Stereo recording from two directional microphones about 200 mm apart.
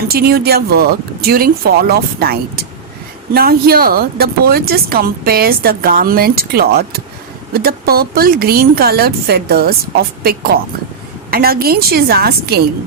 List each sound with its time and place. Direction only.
0.1 s speech: 50° right (ahead or behind)